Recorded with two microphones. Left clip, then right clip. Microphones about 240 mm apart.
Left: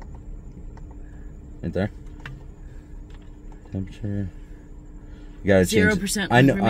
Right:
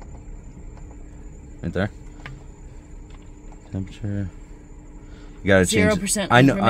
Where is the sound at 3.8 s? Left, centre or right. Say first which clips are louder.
Right 1 dB; right.